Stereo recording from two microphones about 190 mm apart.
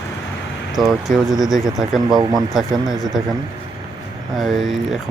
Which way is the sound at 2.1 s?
20° right (ahead or behind).